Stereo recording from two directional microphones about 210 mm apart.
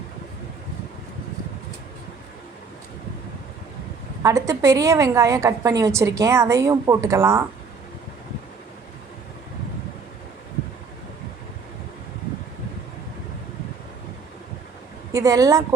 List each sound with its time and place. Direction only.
4.2 s a woman's voice: 15° right (ahead or behind)
15.1 s a woman's voice: 15° right (ahead or behind)